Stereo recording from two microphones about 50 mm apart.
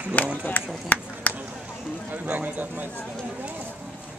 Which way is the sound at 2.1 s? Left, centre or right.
Right.